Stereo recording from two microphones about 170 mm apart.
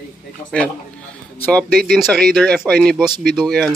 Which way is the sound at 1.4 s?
5° left (ahead or behind).